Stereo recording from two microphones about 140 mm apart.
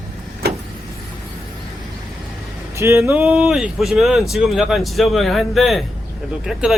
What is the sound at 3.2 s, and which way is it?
Speech, 5° right (ahead or behind).